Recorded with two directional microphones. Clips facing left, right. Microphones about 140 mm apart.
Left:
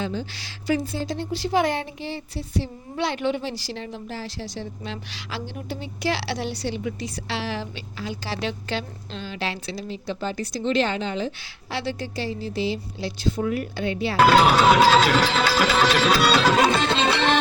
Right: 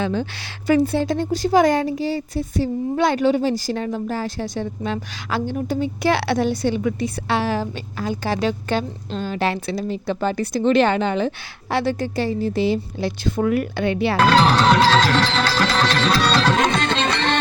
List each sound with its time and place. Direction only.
0.0 s a woman's voice: 60° right (ahead or behind)
11.7 s a woman's voice: 50° right (ahead or behind)
14.2 s music: 10° left (ahead or behind)